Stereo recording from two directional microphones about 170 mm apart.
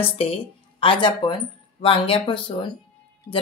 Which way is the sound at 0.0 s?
35° left (ahead or behind).